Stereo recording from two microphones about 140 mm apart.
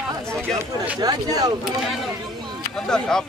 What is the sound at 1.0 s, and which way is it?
Speech, 25° right (ahead or behind).